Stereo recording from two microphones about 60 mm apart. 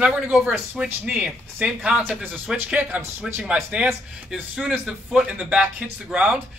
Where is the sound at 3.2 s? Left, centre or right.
Centre.